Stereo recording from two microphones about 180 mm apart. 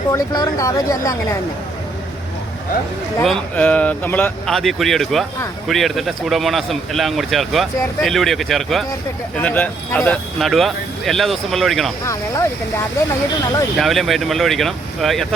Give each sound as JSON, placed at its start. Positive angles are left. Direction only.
{"t": 0.1, "sound": "speech", "side_deg": 20}
{"t": 3.2, "sound": "speech", "side_deg": 5}
{"t": 12.0, "sound": "speech", "side_deg": 15}
{"t": 13.7, "sound": "speech", "side_deg": 0}